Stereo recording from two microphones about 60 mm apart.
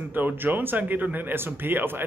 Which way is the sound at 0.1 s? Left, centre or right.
Right.